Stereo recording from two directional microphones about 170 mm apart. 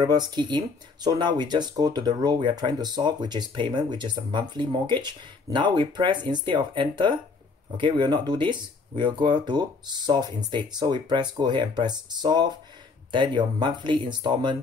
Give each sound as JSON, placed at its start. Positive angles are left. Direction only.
{"t": 0.0, "sound": "speech", "side_deg": -25}